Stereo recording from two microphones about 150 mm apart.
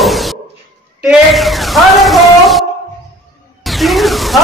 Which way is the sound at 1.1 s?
Centre (ahead or behind).